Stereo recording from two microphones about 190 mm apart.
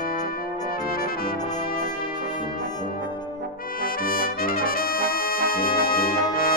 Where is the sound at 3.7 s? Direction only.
50° left (ahead or behind).